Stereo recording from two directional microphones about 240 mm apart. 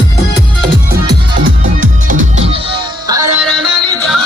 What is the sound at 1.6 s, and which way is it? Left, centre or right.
Music, right.